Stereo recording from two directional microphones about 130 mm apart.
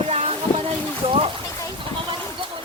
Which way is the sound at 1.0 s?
45° right (ahead or behind).